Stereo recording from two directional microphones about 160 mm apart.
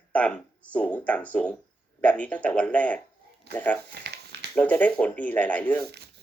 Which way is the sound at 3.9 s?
90° right.